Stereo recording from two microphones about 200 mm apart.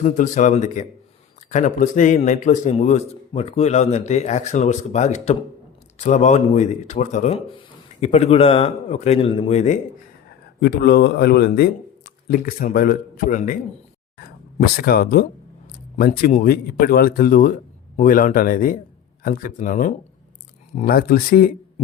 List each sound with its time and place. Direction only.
0.0 s speech: 40° left (ahead or behind)
10.6 s a man's voice: 55° left (ahead or behind)
14.2 s a sound: 50° left (ahead or behind)
16.3 s a man's voice: 45° left (ahead or behind)